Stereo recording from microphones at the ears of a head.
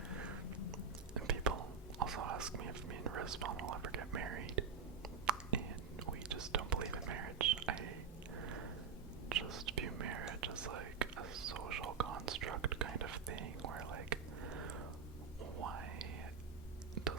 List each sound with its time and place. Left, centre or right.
0.4 s chewing: left
1.1 s whispering: right
9.3 s whispering: right